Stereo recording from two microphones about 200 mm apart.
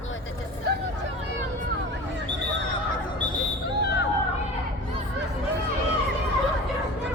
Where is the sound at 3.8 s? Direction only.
55° left (ahead or behind).